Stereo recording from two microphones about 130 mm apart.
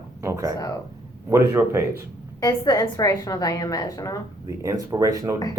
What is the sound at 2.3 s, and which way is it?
A woman's voice, 30° left (ahead or behind).